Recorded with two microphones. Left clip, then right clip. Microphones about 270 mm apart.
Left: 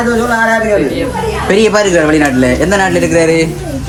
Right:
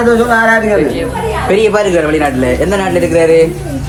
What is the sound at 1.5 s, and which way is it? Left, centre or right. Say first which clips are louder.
A man's voice: left 1 dB; left.